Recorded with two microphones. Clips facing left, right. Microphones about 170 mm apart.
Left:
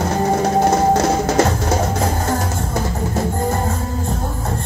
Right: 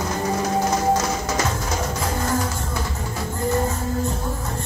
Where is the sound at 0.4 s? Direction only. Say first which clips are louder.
Left 6 dB; 55° left (ahead or behind).